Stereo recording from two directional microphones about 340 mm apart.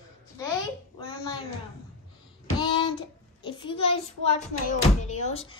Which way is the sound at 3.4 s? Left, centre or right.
Centre.